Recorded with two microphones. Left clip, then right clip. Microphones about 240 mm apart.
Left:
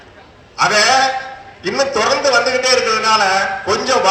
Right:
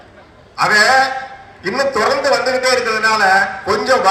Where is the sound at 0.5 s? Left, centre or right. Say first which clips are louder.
Right 1 dB; centre.